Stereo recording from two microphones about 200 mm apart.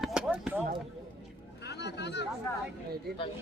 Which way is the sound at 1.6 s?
60° left (ahead or behind).